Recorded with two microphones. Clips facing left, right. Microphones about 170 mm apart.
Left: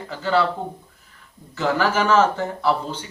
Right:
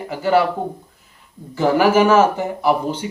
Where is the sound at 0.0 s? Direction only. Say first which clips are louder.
Right 4 dB; 15° right (ahead or behind).